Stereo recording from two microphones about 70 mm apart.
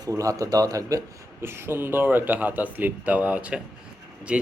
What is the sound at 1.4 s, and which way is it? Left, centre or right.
A man's voice, right.